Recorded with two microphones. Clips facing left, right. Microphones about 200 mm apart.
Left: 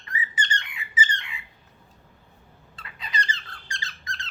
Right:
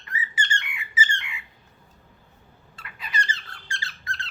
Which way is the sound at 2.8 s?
20° left (ahead or behind).